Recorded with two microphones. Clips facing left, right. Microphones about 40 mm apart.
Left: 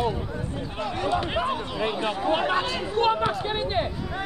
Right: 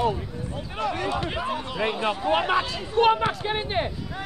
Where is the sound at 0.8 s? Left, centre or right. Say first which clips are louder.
Right 1 dB; right.